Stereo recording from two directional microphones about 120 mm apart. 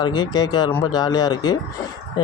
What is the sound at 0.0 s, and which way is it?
Speech, 35° left (ahead or behind).